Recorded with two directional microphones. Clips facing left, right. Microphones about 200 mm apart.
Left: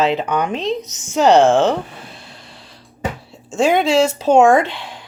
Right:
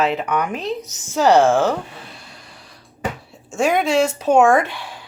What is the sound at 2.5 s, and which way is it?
Music, 25° left (ahead or behind).